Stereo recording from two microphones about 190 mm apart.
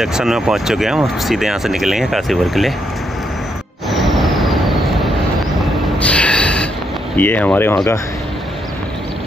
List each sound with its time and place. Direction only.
0.0 s speech: centre (ahead or behind)
3.9 s vehicle: centre (ahead or behind)
5.9 s a sound: 5° left (ahead or behind)
7.2 s speech: 10° left (ahead or behind)